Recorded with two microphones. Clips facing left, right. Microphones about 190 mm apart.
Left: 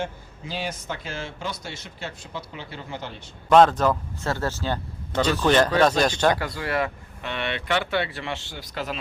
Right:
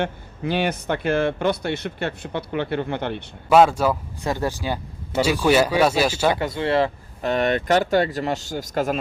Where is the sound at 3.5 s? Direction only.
10° right (ahead or behind).